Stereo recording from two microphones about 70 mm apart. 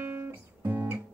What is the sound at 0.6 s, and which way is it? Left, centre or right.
Guitar, right.